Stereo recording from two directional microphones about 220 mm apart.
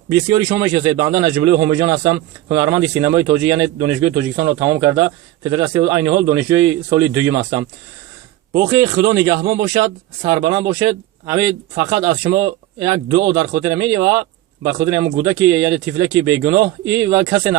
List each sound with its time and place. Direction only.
0.1 s speech: 15° right (ahead or behind)